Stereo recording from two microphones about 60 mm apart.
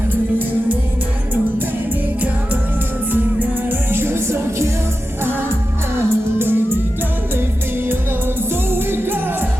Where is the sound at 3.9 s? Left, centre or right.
Right.